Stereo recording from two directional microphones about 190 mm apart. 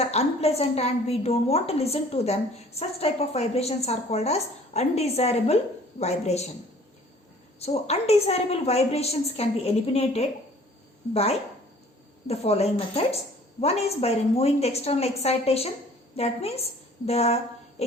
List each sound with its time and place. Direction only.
0.0 s a woman's voice: 35° left (ahead or behind)
7.6 s a woman's voice: 35° left (ahead or behind)